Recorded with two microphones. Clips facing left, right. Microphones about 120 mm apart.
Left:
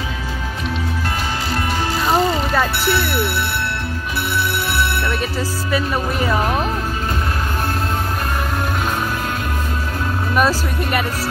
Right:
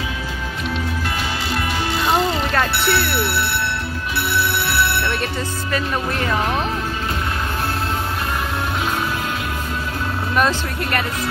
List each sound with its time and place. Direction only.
1.5 s music: 40° left (ahead or behind)
2.9 s speech: 45° left (ahead or behind)
4.6 s music: 45° left (ahead or behind)
5.2 s speech: 5° left (ahead or behind)
10.3 s speech: 5° left (ahead or behind)